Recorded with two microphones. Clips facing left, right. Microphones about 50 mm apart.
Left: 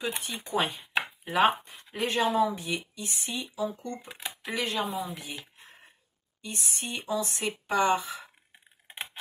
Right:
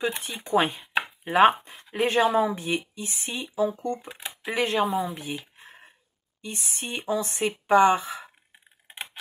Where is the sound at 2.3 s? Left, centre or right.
Right.